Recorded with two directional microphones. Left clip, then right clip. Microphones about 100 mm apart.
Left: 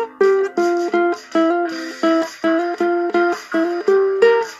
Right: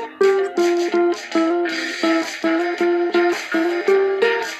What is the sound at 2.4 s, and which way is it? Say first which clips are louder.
Music: left 2 dB; 70° left (ahead or behind).